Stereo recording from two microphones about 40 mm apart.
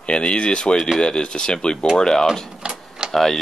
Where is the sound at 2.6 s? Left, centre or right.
Centre.